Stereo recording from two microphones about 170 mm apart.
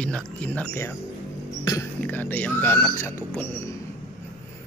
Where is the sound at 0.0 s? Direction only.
5° left (ahead or behind).